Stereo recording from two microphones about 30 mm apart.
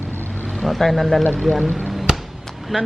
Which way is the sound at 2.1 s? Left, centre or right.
Right.